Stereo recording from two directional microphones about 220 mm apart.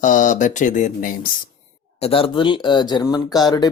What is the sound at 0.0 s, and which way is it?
Speech, 35° left (ahead or behind).